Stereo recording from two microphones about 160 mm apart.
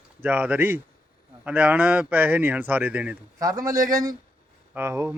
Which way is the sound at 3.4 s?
20° right (ahead or behind).